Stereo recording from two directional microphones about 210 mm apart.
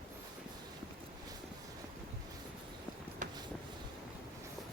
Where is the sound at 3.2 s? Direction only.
35° right (ahead or behind).